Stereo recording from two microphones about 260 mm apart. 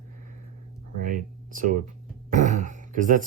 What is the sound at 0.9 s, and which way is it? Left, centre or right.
Speech, right.